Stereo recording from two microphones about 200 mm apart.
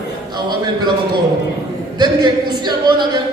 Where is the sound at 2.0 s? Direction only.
20° right (ahead or behind).